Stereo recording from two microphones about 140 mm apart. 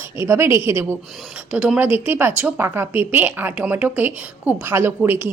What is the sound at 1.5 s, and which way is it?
A woman's voice, 5° right (ahead or behind).